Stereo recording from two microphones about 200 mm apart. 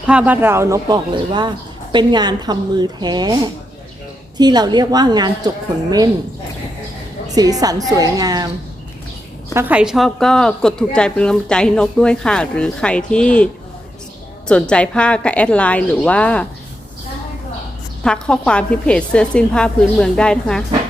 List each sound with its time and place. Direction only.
0.1 s speech: 5° right (ahead or behind)
7.3 s speech: 20° right (ahead or behind)
9.6 s a woman's voice: 10° right (ahead or behind)
18.0 s a woman's voice: 5° left (ahead or behind)